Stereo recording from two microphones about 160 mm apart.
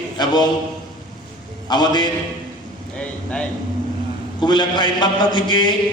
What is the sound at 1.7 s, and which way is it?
Speech, 25° left (ahead or behind).